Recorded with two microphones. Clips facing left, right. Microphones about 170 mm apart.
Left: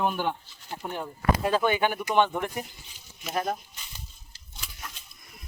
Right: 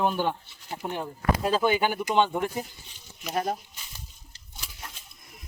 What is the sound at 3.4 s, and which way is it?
Speech, 10° right (ahead or behind).